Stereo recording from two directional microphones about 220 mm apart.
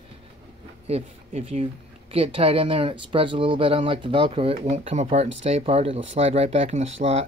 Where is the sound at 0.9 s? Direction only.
30° right (ahead or behind).